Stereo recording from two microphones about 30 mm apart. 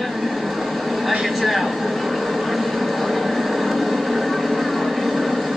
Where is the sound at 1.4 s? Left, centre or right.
Centre.